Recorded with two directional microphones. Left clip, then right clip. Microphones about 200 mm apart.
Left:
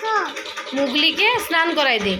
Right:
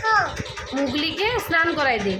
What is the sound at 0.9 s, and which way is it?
Speech, 20° right (ahead or behind).